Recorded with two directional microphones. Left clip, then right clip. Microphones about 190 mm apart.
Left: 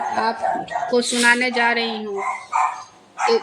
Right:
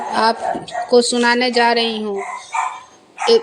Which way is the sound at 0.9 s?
30° right (ahead or behind).